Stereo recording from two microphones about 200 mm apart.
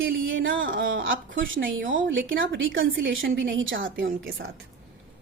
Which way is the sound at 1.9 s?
70° right (ahead or behind).